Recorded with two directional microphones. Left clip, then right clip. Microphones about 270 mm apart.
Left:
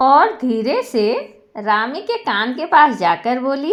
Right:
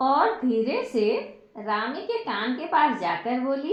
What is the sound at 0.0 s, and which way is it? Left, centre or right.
A woman's voice, left.